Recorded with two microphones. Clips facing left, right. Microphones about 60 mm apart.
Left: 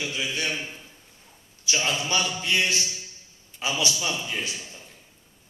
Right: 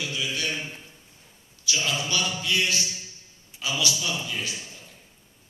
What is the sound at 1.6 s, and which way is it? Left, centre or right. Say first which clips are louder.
A man's voice: left 1 dB; left.